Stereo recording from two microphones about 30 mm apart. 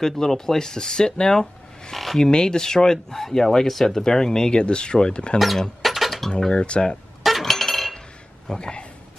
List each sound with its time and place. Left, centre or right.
0.0 s speech: centre
1.4 s a sound: centre
2.1 s speech: left
5.8 s a sound: centre
6.5 s speech: left
7.2 s chink: centre
8.5 s speech: left